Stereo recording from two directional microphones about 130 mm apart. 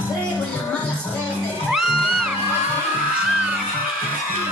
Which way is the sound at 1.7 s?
5° right (ahead or behind).